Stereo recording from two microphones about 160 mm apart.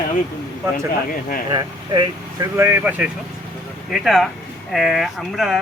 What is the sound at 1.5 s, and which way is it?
Speech, 25° right (ahead or behind).